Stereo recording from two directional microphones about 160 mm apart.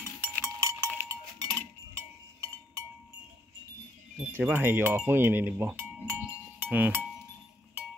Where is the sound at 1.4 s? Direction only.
20° right (ahead or behind).